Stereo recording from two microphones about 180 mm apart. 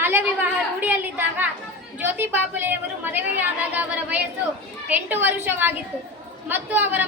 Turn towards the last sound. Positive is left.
turn(degrees=-10)  # may be behind; listen again after turning